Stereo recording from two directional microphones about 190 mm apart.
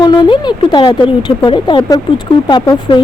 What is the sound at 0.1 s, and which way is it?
Speech, 25° left (ahead or behind).